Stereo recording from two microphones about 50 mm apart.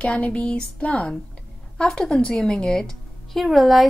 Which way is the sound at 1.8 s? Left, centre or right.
Centre.